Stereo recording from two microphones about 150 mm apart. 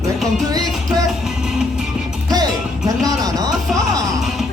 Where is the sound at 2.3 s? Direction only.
25° right (ahead or behind).